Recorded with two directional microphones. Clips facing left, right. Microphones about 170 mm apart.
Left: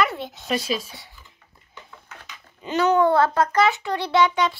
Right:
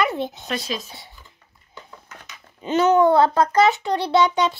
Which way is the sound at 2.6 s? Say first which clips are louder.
Right 3 dB; 20° right (ahead or behind).